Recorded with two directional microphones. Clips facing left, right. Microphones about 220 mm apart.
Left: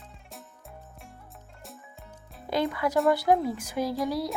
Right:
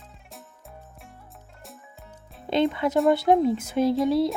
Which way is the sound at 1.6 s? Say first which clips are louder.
Right 1 dB; centre (ahead or behind).